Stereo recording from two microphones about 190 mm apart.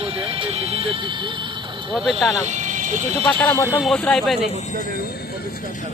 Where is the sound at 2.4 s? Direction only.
40° right (ahead or behind).